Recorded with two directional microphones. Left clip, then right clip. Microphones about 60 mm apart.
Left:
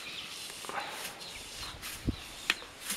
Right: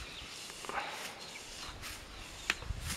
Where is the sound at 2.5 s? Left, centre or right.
Centre.